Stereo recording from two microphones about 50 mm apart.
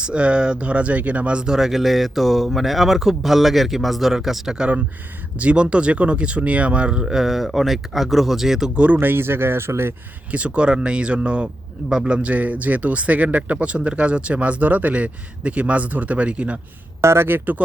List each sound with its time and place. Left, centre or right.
0.0 s speech: right
1.5 s speech: centre
5.4 s speech: right; by 8.7 s centre
8.7 s speech: right
9.0 s speech: right
10.3 s speech: right
17.0 s speech: right
17.2 s speech: right